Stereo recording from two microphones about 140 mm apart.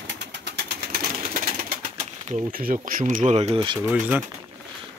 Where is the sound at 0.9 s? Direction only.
85° right.